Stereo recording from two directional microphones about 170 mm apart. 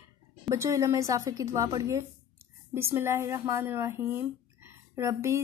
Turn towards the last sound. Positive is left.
turn(degrees=-15)  # may be behind; listen again after turning